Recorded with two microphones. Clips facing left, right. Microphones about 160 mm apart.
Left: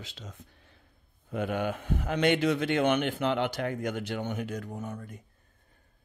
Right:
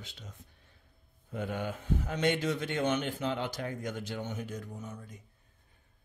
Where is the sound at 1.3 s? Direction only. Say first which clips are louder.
Left 5 dB; 75° left (ahead or behind); by 5.2 s 55° left (ahead or behind).